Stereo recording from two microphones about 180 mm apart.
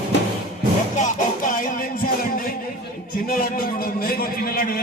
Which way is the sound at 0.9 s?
45° left (ahead or behind).